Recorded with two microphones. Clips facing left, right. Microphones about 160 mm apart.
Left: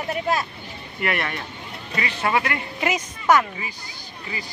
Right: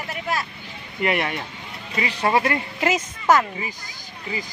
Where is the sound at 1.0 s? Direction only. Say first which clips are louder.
Right 3 dB; 20° right (ahead or behind).